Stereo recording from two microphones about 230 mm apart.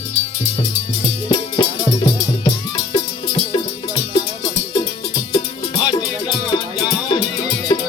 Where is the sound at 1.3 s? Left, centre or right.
Centre.